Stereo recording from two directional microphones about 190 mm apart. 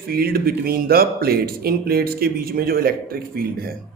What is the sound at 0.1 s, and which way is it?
Speech, 50° right (ahead or behind).